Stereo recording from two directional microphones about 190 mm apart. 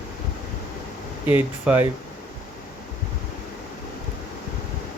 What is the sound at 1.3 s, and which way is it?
Speech, 10° right (ahead or behind).